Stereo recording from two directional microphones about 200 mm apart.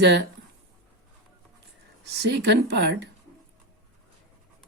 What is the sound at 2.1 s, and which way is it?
Speech, 60° right (ahead or behind).